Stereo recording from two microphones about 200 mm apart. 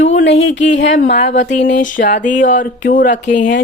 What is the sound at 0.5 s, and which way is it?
Speech, 60° left (ahead or behind).